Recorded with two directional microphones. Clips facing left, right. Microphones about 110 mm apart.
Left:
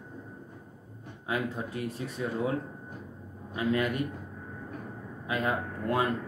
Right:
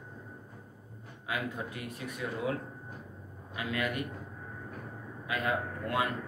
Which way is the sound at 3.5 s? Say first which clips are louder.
Left 6 dB; 30° left (ahead or behind).